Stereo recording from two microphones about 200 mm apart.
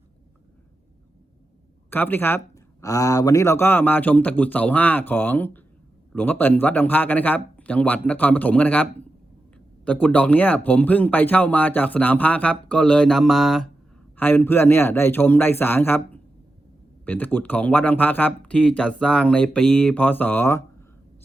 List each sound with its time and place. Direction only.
1.9 s speech: 10° left (ahead or behind)